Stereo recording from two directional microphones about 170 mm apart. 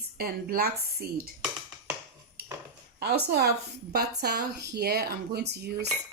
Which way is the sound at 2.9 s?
70° right (ahead or behind).